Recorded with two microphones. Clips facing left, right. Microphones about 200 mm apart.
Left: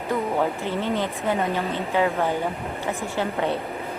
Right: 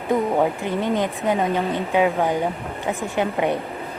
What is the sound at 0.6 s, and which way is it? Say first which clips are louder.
Speech: right 3 dB; 15° right (ahead or behind).